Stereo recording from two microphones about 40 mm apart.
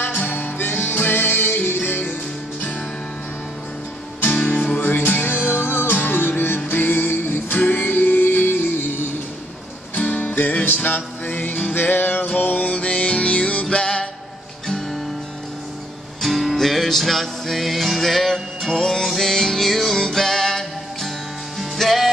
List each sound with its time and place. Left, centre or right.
0.1 s music: left
4.2 s music: left
9.9 s music: left
12.7 s music: left
16.2 s music: centre
18.8 s music: centre